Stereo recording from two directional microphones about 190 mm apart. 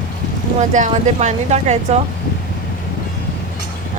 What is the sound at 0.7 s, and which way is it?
Speech, 40° right (ahead or behind).